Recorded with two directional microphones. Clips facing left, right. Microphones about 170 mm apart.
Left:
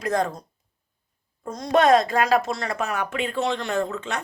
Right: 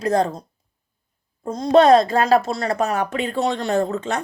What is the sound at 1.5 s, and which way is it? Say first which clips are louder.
Speech: right 5 dB; 30° right (ahead or behind).